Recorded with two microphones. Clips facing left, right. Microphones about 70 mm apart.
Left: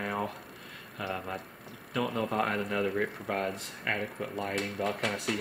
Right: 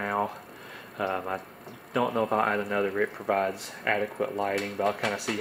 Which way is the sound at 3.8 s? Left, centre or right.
Right.